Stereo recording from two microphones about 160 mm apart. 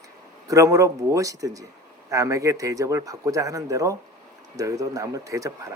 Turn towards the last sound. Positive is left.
turn(degrees=-20)  # may be behind; listen again after turning